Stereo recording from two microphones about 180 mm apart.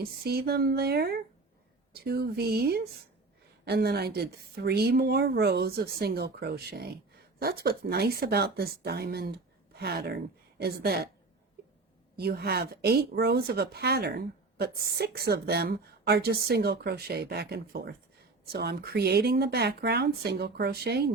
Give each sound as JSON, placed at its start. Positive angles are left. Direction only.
{"t": 0.0, "sound": "speech", "side_deg": -60}
{"t": 12.1, "sound": "speech", "side_deg": -60}